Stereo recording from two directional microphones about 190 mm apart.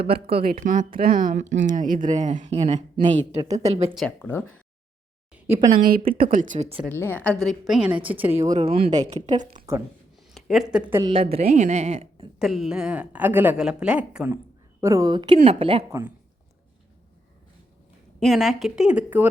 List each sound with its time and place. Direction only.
0.0 s speech: 55° right (ahead or behind)
0.5 s speech: 40° right (ahead or behind)
2.6 s speech: 25° right (ahead or behind)
3.6 s a woman's voice: 35° right (ahead or behind)
3.9 s speech: 5° left (ahead or behind)
5.7 s a woman's voice: 50° right (ahead or behind); by 6.8 s 35° right (ahead or behind)
6.9 s a woman's voice: 10° left (ahead or behind); by 8.4 s 10° right (ahead or behind)
8.5 s a woman's voice: 30° right (ahead or behind)
10.3 s speech: centre (ahead or behind)
11.0 s a woman's voice: 30° right (ahead or behind)
12.4 s a woman's voice: centre (ahead or behind)
14.8 s speech: 15° right (ahead or behind)
15.9 s a woman's voice: 15° right (ahead or behind)
18.2 s a woman's voice: centre (ahead or behind)